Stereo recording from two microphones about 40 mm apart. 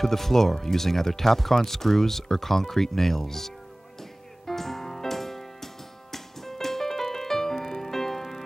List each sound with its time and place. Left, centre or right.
0.0 s speech: centre
4.5 s music: centre